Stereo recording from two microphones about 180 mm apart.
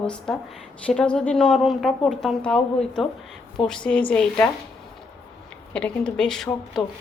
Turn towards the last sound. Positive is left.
turn(degrees=0)  # may be behind; listen again after turning